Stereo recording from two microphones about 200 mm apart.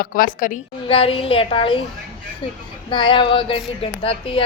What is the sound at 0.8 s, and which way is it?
Speech, 25° left (ahead or behind).